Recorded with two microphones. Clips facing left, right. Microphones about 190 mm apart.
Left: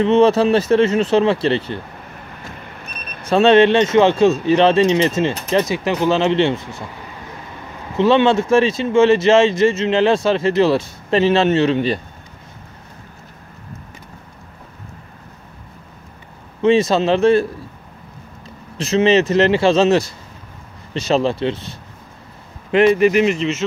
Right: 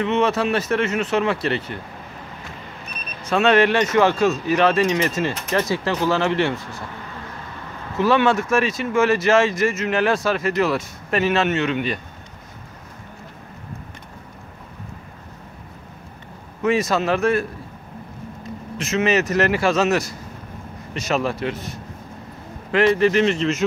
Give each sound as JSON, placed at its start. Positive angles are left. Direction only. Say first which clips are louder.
{"t": 0.0, "sound": "speech", "louder": "left 7 dB", "side_deg": 30}
{"t": 3.3, "sound": "speech", "louder": "left 5 dB", "side_deg": 30}
{"t": 8.0, "sound": "speech", "louder": "left 4 dB", "side_deg": 25}
{"t": 16.6, "sound": "speech", "louder": "left 5 dB", "side_deg": 30}
{"t": 22.7, "sound": "speech", "louder": "left 4 dB", "side_deg": 20}